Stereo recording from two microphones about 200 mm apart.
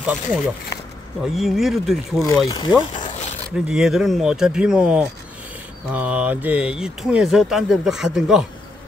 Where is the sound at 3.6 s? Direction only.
5° right (ahead or behind).